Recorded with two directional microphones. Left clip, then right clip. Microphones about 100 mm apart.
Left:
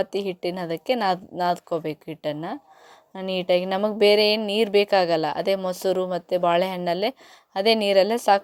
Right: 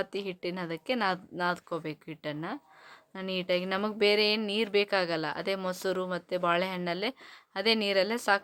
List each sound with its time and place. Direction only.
0.0 s speech: 25° left (ahead or behind)